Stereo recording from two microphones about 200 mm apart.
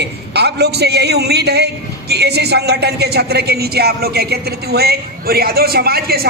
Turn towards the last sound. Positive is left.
turn(degrees=-50)  # may be behind; listen again after turning